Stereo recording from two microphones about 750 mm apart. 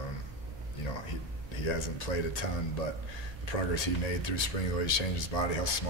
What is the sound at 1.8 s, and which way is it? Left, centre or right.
Speech, left.